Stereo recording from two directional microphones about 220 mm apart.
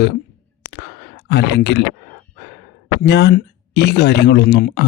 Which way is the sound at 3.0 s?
50° left (ahead or behind).